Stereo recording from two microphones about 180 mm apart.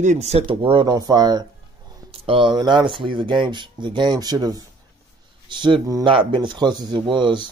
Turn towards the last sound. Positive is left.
turn(degrees=-25)  # may be behind; listen again after turning